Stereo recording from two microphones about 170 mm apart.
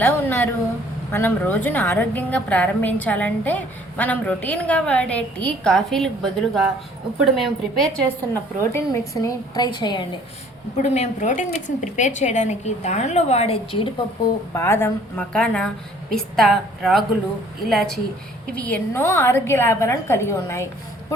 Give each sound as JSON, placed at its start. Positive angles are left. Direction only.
{"t": 0.0, "sound": "a sound", "side_deg": 10}
{"t": 1.1, "sound": "a woman's voice", "side_deg": 10}
{"t": 10.8, "sound": "a woman's voice", "side_deg": 45}
{"t": 14.5, "sound": "a woman's voice", "side_deg": 15}